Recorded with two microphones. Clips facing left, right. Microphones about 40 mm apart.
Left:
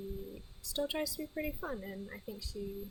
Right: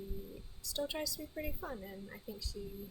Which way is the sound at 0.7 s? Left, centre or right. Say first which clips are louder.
Left 3 dB; centre.